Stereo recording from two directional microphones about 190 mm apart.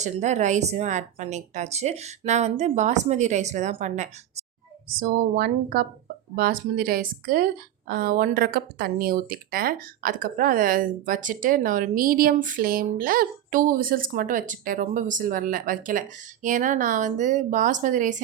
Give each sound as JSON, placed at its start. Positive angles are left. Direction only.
{"t": 0.0, "sound": "a woman's voice", "side_deg": -40}
{"t": 4.9, "sound": "speech", "side_deg": -50}